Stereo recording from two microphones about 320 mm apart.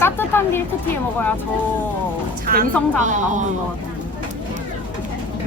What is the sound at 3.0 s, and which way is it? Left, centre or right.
Speech, right.